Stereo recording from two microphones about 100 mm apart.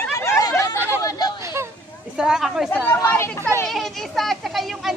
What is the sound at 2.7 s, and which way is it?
Speech, 20° left (ahead or behind).